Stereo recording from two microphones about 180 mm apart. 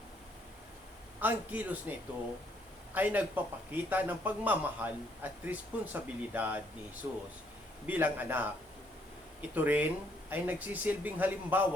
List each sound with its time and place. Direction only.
1.2 s a man's voice: 10° right (ahead or behind)
9.6 s a man's voice: 10° right (ahead or behind)